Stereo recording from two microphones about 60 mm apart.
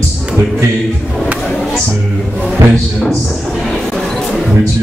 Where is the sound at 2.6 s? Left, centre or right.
Right.